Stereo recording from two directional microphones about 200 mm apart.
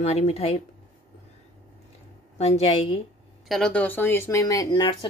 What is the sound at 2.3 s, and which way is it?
Speech, 30° left (ahead or behind).